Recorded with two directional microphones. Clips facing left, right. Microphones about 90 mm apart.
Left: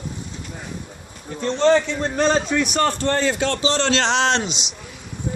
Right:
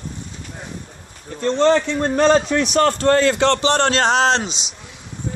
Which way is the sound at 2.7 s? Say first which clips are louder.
Right 8 dB; 85° right.